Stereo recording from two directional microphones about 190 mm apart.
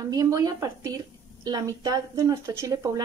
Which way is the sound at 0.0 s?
20° right (ahead or behind).